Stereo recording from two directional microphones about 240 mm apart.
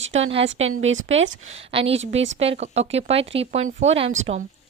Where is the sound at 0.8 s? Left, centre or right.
Right.